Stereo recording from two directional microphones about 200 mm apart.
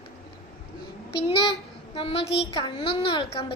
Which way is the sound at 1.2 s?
25° left (ahead or behind).